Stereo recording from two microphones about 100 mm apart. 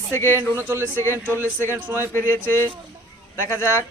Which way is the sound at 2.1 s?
25° left (ahead or behind).